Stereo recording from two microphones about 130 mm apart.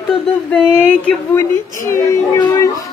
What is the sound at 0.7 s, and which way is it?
A woman's voice, 15° left (ahead or behind).